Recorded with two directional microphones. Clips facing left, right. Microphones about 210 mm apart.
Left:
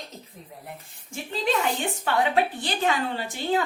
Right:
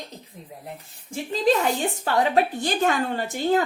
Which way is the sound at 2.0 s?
40° right (ahead or behind).